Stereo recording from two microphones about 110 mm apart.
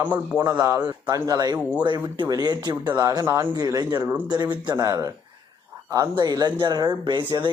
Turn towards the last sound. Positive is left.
turn(degrees=-45)  # may be behind; listen again after turning